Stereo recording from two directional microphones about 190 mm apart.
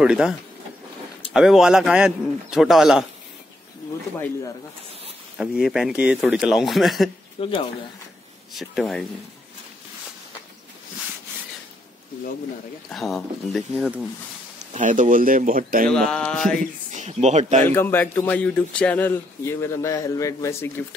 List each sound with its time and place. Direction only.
0.0 s speech: 5° right (ahead or behind)
5.4 s speech: 5° right (ahead or behind)
7.3 s speech: 30° left (ahead or behind)
8.5 s speech: centre (ahead or behind)
12.9 s speech: centre (ahead or behind)
14.7 s speech: 40° right (ahead or behind)
15.9 s speech: 5° left (ahead or behind)
16.9 s speech: 40° right (ahead or behind)
17.6 s speech: 10° left (ahead or behind)